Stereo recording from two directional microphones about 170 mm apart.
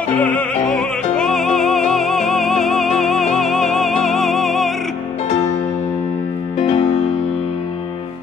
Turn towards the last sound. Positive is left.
turn(degrees=35)  # may be behind; listen again after turning